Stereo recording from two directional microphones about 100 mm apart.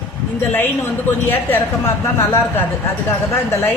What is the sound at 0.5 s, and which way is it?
A woman's voice, 20° left (ahead or behind).